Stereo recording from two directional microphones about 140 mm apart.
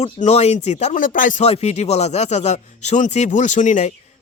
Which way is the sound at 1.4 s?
50° left (ahead or behind).